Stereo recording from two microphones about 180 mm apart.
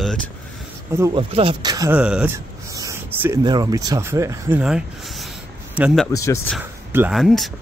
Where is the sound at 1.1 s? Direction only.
30° right (ahead or behind).